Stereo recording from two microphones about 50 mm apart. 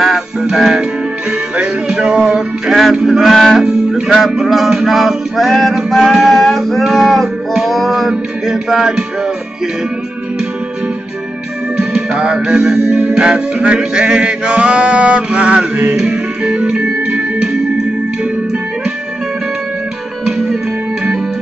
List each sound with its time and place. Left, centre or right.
0.0 s music: centre
1.6 s male singing: centre
3.5 s music: centre
11.7 s music: centre; by 16.0 s right
16.0 s music: centre
20.2 s music: centre